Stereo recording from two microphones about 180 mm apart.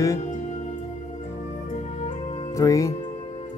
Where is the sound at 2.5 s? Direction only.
15° left (ahead or behind).